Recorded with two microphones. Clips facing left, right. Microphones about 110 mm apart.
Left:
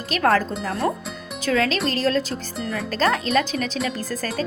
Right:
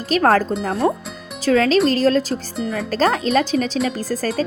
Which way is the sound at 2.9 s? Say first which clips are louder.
Right 3 dB; 35° right (ahead or behind).